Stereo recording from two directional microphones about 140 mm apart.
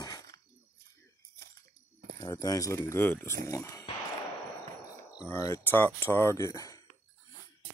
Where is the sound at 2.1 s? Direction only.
25° left (ahead or behind).